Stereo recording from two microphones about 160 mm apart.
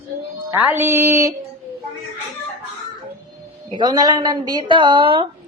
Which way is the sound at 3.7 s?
25° right (ahead or behind).